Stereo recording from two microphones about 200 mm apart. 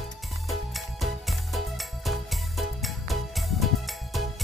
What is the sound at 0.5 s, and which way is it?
Music, centre (ahead or behind).